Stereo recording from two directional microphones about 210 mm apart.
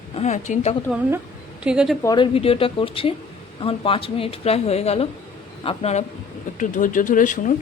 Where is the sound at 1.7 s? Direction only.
5° right (ahead or behind).